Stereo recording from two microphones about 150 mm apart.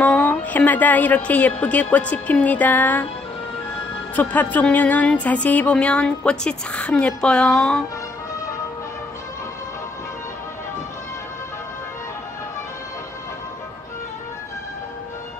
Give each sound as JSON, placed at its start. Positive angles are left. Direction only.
{"t": 0.0, "sound": "speech", "side_deg": 10}
{"t": 4.1, "sound": "speech", "side_deg": 10}